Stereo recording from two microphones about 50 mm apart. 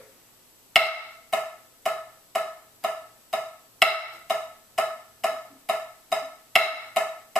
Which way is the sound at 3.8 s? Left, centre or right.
Centre.